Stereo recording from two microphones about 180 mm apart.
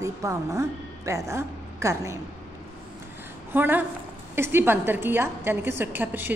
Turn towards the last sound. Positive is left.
turn(degrees=-10)  # may be behind; listen again after turning